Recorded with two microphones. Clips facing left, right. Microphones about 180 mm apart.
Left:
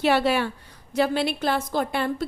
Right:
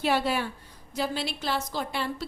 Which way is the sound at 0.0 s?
75° left (ahead or behind).